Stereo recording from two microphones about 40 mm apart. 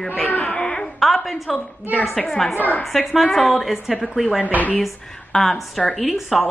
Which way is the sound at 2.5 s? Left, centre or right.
Left.